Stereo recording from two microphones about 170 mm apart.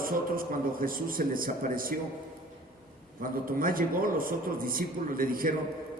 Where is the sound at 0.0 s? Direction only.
55° right (ahead or behind).